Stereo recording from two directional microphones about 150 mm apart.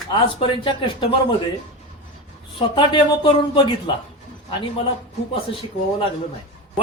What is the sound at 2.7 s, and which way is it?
Speech, 35° left (ahead or behind).